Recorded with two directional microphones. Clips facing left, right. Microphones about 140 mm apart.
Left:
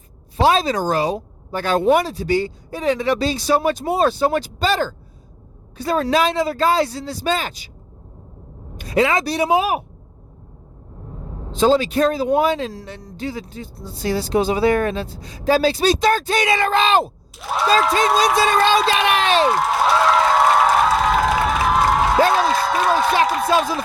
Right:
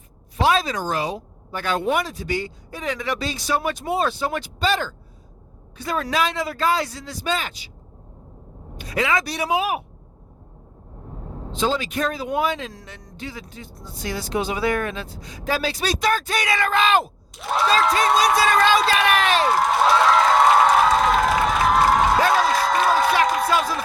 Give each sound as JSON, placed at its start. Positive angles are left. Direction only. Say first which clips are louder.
{"t": 0.3, "sound": "speech", "louder": "left 4 dB", "side_deg": 30}
{"t": 8.9, "sound": "speech", "louder": "left 5 dB", "side_deg": 30}
{"t": 11.5, "sound": "speech", "louder": "left 8 dB", "side_deg": 40}
{"t": 17.3, "sound": "speech", "louder": "left 2 dB", "side_deg": 0}
{"t": 18.3, "sound": "speech", "louder": "left 2 dB", "side_deg": 25}
{"t": 20.1, "sound": "crowd", "louder": "even", "side_deg": 0}
{"t": 22.4, "sound": "a sound", "louder": "left 1 dB", "side_deg": 0}